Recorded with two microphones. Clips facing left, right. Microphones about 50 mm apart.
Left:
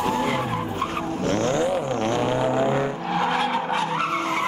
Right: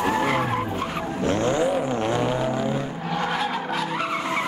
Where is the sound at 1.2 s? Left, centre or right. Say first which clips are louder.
Right 1 dB; centre.